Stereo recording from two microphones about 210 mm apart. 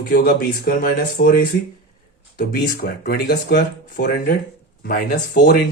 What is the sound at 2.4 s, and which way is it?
Speech, 45° left (ahead or behind).